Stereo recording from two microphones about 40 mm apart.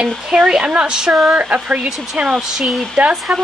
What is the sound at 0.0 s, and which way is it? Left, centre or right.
Speech, centre.